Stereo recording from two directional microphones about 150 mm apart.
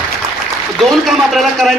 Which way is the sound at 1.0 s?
Centre (ahead or behind).